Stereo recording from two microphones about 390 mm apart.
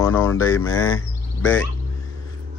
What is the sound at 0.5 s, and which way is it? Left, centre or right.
Speech, left.